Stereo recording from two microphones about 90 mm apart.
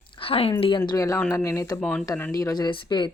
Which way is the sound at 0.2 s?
90° left.